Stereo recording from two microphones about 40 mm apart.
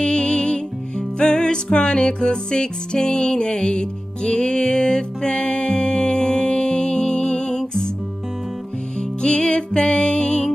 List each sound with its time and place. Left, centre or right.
0.0 s music: left
9.2 s music: left